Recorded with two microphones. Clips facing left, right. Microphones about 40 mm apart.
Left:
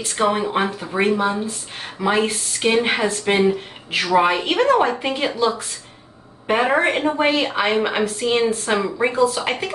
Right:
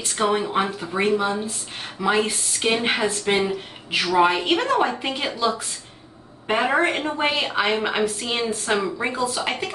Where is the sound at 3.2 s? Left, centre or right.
Left.